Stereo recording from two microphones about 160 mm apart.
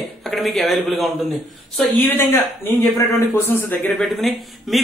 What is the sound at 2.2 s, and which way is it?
A man's voice, 15° left (ahead or behind).